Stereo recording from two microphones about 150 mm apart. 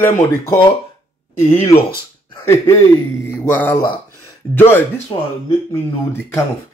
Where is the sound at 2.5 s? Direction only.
15° left (ahead or behind).